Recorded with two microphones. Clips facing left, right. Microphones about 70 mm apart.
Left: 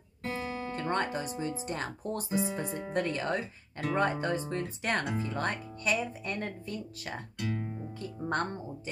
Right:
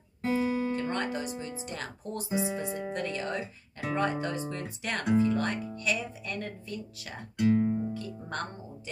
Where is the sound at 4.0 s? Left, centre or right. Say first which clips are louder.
Left 1 dB; left.